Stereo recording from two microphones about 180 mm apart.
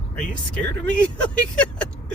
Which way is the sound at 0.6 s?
5° left (ahead or behind).